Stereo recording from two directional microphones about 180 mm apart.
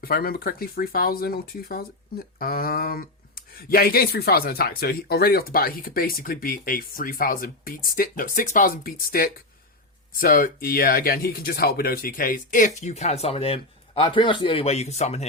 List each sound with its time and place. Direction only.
0.0 s speech: 55° left (ahead or behind); by 15.3 s 35° left (ahead or behind)